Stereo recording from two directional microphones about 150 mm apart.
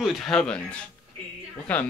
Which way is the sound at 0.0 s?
5° left (ahead or behind).